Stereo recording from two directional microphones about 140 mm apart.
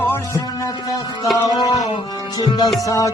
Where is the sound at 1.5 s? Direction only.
30° left (ahead or behind).